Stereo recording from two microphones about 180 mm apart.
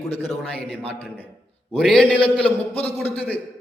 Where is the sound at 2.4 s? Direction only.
35° left (ahead or behind).